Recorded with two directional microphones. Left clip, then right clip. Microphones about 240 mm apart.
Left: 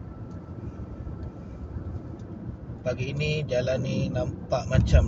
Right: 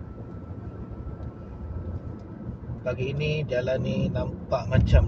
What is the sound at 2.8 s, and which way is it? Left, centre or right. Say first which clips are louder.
A man's voice: right 1 dB; centre.